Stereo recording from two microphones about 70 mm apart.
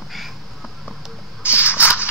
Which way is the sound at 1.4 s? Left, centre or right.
Right.